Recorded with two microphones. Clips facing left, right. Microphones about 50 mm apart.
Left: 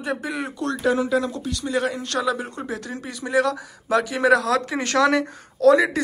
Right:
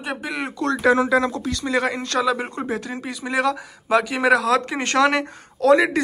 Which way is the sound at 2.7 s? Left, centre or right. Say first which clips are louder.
Right 3 dB; right.